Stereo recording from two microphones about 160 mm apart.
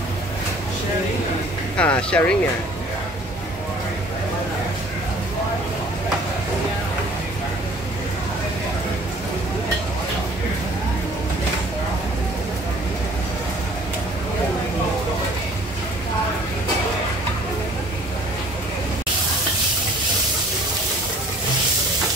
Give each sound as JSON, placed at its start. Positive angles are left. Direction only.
{"t": 1.8, "sound": "speech", "side_deg": 5}